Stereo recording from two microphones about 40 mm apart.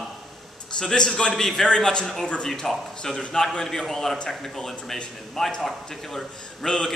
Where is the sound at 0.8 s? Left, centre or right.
Left.